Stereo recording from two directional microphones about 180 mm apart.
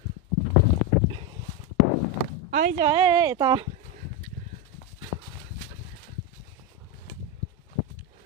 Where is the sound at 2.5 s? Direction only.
50° right (ahead or behind).